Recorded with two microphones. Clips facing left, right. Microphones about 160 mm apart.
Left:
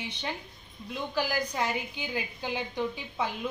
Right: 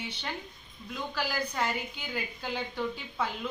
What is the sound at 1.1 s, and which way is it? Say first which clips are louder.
A woman's voice: left 3 dB; 15° left (ahead or behind).